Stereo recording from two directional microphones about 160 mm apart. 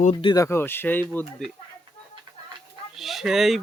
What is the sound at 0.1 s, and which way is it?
Speech, 30° left (ahead or behind).